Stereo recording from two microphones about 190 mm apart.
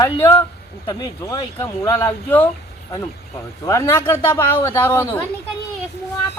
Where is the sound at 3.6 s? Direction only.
15° left (ahead or behind).